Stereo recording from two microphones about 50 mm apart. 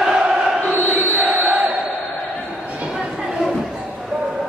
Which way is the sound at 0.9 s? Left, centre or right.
Right.